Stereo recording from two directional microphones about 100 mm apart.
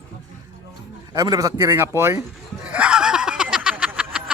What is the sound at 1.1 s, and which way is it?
A man's voice, 35° right (ahead or behind).